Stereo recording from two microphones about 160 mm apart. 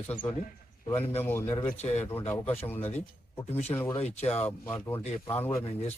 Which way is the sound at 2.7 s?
10° left (ahead or behind).